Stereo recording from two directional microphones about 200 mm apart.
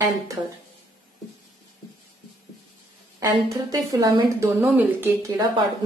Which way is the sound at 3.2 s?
15° right (ahead or behind).